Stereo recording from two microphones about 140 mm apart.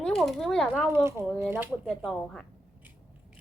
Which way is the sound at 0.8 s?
20° right (ahead or behind).